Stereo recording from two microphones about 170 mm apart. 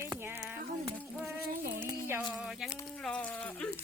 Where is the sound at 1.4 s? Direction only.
60° right (ahead or behind).